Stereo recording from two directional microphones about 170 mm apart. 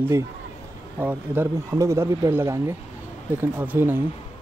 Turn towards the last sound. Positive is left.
turn(degrees=-15)  # may be behind; listen again after turning